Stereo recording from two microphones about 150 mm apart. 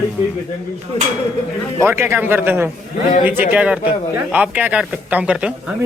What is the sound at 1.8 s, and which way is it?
Speech, 15° right (ahead or behind).